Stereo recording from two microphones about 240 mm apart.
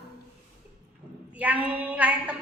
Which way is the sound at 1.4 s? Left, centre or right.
Centre.